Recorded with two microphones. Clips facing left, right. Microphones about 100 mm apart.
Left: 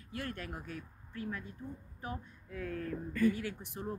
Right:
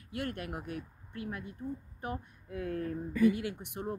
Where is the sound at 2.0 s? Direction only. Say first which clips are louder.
Even; 50° right (ahead or behind).